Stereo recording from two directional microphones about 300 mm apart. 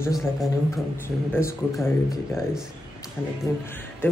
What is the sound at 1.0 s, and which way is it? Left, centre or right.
Speech, centre.